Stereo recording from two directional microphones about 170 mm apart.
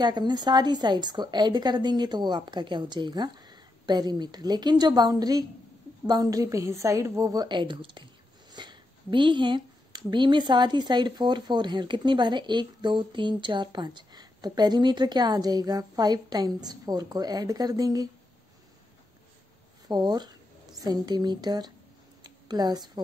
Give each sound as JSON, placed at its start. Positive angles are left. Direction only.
{"t": 0.0, "sound": "a woman's voice", "side_deg": -25}
{"t": 19.9, "sound": "a woman's voice", "side_deg": -25}